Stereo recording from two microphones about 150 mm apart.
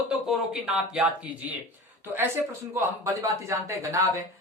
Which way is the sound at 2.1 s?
15° right (ahead or behind).